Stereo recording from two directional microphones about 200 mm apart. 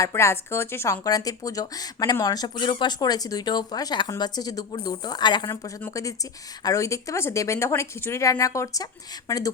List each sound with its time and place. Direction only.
0.0 s speech: 15° left (ahead or behind)